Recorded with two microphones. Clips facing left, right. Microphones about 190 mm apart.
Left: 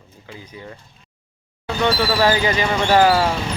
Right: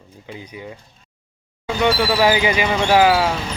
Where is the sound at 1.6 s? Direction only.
10° right (ahead or behind).